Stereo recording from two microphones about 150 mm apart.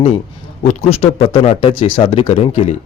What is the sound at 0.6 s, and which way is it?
A man's voice, 45° left (ahead or behind).